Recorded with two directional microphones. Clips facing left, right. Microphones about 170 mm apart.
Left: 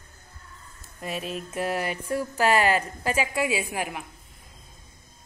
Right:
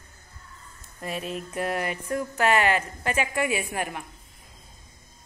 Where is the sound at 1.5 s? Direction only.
25° left (ahead or behind).